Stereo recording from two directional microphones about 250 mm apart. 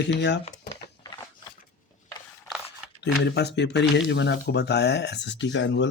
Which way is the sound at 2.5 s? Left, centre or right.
Centre.